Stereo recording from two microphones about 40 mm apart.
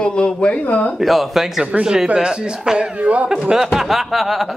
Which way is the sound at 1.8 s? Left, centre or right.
Centre.